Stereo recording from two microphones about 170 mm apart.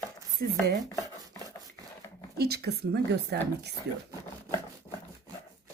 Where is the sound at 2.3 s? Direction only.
70° right (ahead or behind).